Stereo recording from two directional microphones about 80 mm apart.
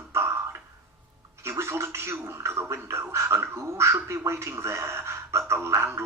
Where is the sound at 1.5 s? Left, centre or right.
Right.